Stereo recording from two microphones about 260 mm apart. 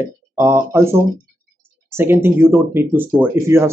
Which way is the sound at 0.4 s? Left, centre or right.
Centre.